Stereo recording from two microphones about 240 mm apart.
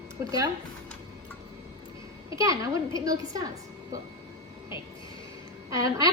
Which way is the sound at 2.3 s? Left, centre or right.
Centre.